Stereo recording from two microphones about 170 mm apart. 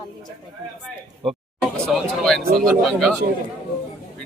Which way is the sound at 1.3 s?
Centre (ahead or behind).